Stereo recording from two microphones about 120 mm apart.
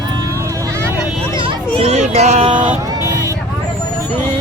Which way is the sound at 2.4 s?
45° right (ahead or behind).